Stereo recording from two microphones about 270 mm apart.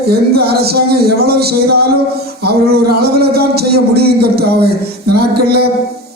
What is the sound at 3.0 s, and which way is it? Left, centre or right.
A man's voice, right.